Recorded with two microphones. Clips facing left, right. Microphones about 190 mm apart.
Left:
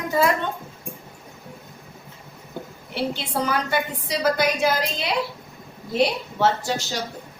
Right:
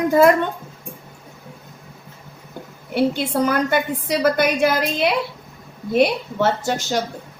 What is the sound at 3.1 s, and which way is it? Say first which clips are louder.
A woman's voice: right 6 dB; 50° right (ahead or behind).